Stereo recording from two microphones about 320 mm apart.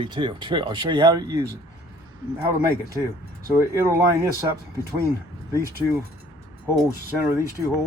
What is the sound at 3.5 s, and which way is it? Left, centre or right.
Speech, centre.